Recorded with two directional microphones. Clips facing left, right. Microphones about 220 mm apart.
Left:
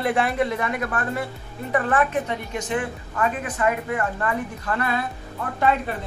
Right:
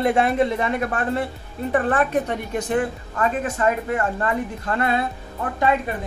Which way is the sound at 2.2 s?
50° right (ahead or behind).